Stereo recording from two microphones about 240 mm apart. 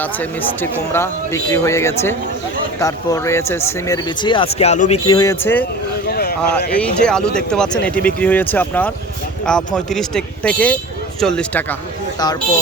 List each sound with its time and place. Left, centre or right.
0.0 s speech: centre
6.1 s a sound: left
6.7 s speech: centre